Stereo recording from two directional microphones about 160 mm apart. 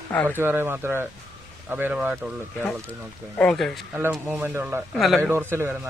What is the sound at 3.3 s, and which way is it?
Speech, 5° left (ahead or behind).